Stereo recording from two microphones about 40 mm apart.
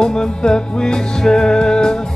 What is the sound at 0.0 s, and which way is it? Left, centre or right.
Music, centre.